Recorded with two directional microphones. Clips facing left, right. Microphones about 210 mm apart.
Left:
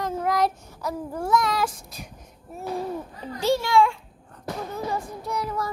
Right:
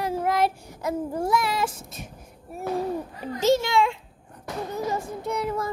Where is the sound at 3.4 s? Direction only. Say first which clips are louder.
Even; 20° right (ahead or behind).